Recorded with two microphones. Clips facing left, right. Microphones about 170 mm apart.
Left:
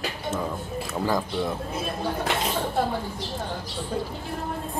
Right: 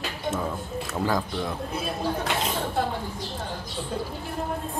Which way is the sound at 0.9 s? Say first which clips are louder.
Left 1 dB; centre (ahead or behind).